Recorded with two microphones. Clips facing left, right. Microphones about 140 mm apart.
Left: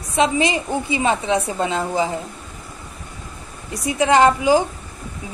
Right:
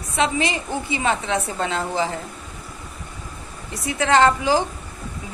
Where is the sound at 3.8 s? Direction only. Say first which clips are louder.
Left 2 dB; 15° left (ahead or behind).